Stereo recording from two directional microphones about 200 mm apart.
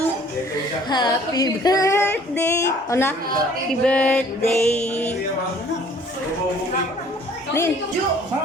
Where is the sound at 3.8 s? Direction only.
5° left (ahead or behind).